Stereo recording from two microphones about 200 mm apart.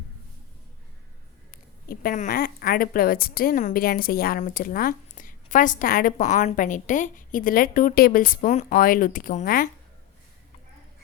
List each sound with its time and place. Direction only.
1.5 s speech: 45° left (ahead or behind)